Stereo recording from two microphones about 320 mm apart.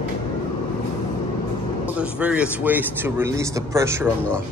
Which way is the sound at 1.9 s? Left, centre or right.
Centre.